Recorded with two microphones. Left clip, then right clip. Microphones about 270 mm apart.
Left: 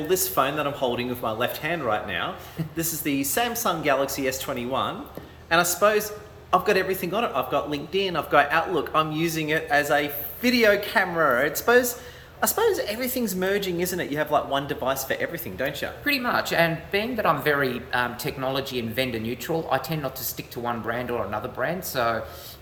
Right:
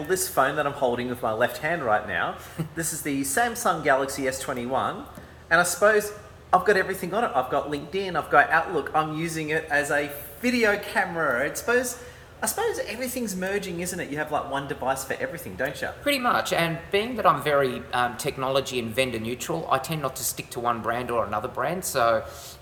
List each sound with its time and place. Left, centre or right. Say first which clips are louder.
0.1 s a woman's voice: right 1 dB; centre